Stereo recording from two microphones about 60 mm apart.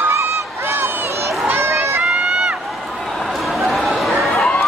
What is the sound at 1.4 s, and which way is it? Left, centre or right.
Crowd, right.